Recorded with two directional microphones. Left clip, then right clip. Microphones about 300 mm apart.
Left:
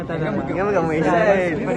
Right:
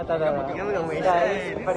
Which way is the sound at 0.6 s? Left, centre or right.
Centre.